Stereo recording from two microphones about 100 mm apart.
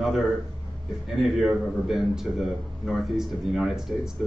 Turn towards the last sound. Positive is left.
turn(degrees=-5)  # may be behind; listen again after turning